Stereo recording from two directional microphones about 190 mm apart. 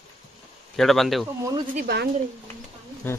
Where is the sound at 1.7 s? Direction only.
55° right (ahead or behind).